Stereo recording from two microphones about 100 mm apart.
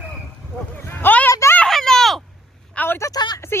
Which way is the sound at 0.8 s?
20° left (ahead or behind).